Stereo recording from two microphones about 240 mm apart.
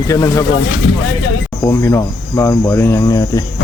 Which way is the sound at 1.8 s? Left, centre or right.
Centre.